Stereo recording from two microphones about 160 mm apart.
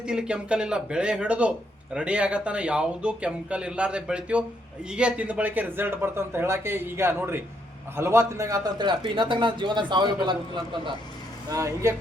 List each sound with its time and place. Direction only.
0.0 s a man's voice: 5° right (ahead or behind); by 10.9 s 30° right (ahead or behind)
11.4 s a man's voice: 20° right (ahead or behind)